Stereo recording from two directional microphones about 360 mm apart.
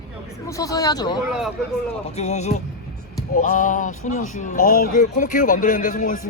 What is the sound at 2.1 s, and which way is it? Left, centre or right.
Speech, centre.